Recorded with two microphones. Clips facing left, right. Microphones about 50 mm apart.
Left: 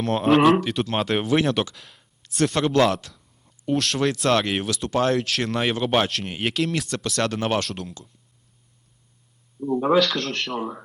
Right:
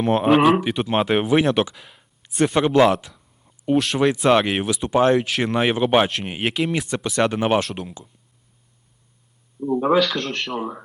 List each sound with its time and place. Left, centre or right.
0.0 s speech: centre
0.6 s speech: centre
9.6 s speech: centre